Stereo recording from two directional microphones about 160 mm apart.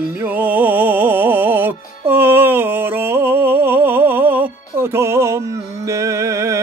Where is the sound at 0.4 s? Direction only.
10° right (ahead or behind).